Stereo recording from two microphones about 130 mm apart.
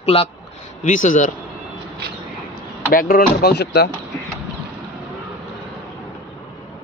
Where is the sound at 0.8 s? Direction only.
80° left.